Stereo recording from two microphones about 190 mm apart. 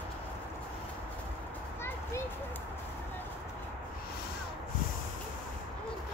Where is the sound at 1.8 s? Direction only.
15° left (ahead or behind).